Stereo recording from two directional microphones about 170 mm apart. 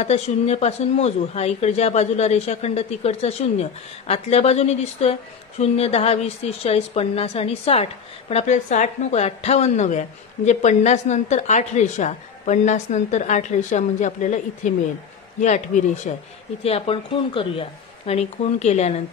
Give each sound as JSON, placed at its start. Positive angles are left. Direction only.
{"t": 0.0, "sound": "a woman's voice", "side_deg": 40}